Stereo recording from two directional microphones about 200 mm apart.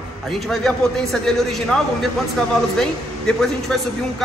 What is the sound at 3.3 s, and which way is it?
Speech, centre (ahead or behind).